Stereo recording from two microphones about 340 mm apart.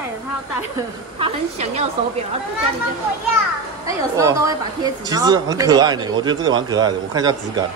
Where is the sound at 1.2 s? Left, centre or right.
Centre.